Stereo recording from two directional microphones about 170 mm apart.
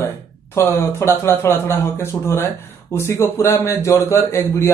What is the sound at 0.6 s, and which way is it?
A man's voice, 15° left (ahead or behind).